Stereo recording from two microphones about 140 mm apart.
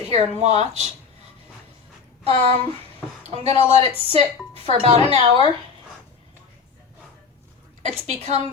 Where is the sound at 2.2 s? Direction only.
45° right (ahead or behind).